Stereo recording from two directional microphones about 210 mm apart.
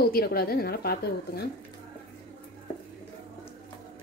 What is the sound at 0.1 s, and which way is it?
A woman's voice, 45° left (ahead or behind).